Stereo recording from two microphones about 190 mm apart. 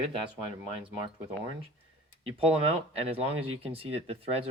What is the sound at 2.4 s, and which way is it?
Speech, 30° right (ahead or behind).